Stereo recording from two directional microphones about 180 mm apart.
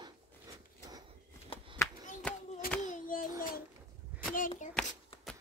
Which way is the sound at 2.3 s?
10° left (ahead or behind).